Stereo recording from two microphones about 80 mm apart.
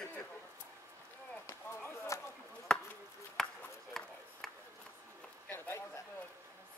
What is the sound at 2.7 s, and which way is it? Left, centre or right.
Chop, centre.